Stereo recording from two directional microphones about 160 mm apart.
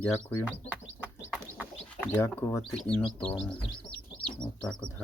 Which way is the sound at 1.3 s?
10° right (ahead or behind).